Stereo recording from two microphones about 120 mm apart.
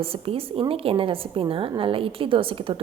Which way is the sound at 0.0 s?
50° right (ahead or behind).